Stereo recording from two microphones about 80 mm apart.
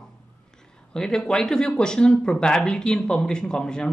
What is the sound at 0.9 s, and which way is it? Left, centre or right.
Speech, centre.